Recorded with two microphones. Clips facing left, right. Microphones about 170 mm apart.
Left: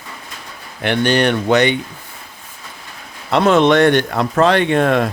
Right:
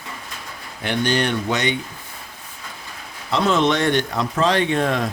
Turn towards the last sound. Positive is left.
turn(degrees=65)  # may be behind; listen again after turning